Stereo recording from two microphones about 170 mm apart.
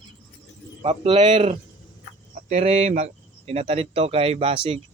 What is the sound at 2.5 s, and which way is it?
Speech, 40° right (ahead or behind).